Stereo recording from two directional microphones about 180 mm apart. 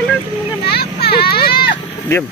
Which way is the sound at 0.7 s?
60° left (ahead or behind).